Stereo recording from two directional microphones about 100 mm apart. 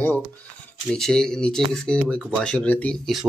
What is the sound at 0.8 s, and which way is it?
Speech, 5° left (ahead or behind).